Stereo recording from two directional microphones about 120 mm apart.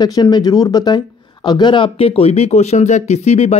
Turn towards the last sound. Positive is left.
turn(degrees=65)  # may be behind; listen again after turning